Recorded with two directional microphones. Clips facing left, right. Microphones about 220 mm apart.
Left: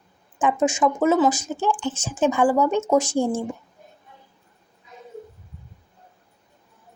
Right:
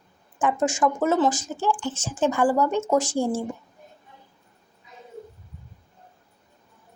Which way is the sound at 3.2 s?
10° right (ahead or behind).